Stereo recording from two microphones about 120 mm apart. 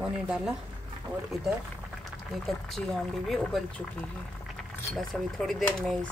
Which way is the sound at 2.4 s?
Centre (ahead or behind).